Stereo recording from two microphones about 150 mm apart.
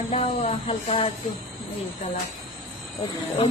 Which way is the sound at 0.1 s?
45° left (ahead or behind).